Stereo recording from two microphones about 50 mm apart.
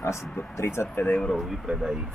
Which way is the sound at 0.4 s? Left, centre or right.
Left.